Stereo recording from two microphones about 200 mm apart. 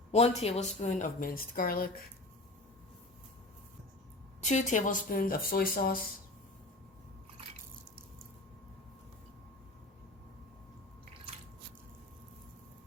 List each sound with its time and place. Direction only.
0.1 s a woman's voice: 30° left (ahead or behind)
4.4 s speech: 35° left (ahead or behind)